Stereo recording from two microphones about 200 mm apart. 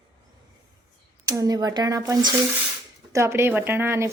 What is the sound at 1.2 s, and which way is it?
Speech, 15° right (ahead or behind).